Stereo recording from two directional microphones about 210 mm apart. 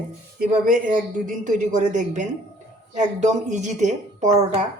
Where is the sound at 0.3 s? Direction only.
40° right (ahead or behind).